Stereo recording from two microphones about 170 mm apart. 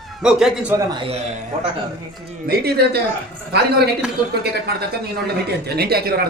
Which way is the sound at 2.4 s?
70° right (ahead or behind).